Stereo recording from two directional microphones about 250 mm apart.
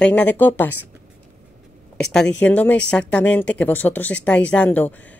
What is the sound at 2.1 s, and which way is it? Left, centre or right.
Speech, centre.